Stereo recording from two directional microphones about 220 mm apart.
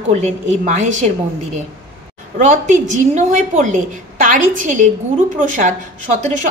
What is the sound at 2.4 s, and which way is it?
Speech, 35° right (ahead or behind).